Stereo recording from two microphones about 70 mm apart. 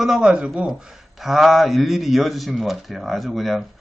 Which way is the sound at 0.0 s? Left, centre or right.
Centre.